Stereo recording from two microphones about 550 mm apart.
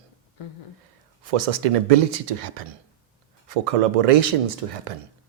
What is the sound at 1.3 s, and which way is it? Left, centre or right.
Speech, right.